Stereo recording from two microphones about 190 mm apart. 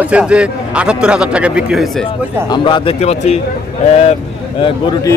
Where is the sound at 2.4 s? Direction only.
25° left (ahead or behind).